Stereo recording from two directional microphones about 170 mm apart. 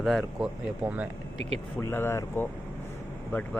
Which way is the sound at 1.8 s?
15° left (ahead or behind).